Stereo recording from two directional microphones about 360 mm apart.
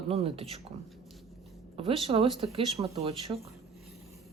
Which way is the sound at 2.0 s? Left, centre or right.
Centre.